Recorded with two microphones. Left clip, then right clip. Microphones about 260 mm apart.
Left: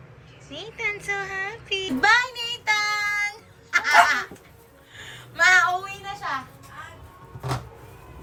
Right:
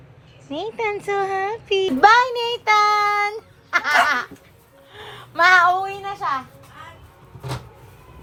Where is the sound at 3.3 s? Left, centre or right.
Centre.